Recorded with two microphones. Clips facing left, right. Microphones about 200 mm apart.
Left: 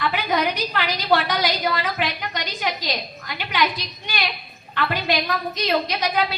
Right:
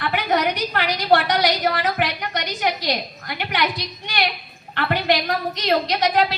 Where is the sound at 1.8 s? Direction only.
70° right (ahead or behind).